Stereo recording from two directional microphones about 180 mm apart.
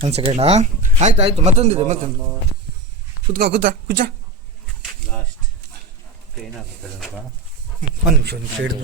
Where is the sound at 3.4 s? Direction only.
60° right (ahead or behind).